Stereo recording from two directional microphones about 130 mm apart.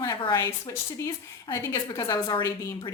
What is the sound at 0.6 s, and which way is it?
A woman's voice, 20° left (ahead or behind).